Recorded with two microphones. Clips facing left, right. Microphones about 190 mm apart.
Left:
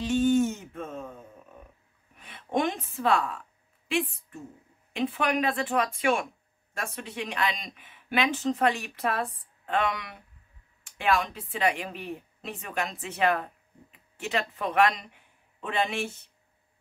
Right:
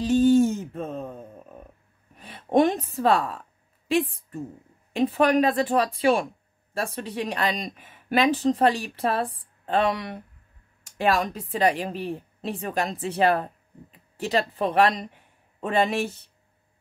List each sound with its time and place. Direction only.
0.0 s music: 35° right (ahead or behind)
2.1 s a sound: 35° right (ahead or behind)
4.9 s a woman's voice: 35° right (ahead or behind)